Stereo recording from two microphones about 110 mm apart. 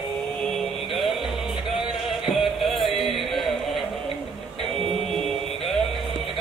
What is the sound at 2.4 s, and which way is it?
Music, centre (ahead or behind).